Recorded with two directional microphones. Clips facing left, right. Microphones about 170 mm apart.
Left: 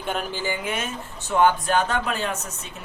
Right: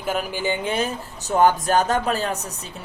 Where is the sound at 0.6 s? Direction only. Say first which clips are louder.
Right 5 dB; 35° right (ahead or behind).